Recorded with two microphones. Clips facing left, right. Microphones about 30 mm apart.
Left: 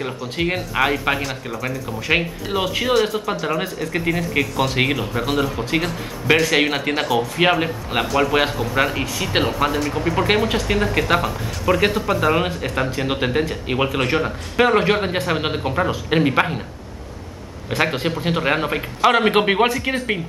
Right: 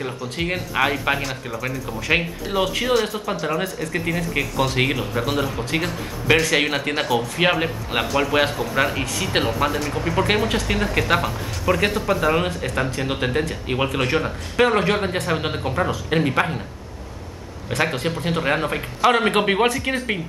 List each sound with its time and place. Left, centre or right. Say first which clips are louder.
0.0 s speech: left 3 dB; centre
17.6 s speech: left 2 dB; centre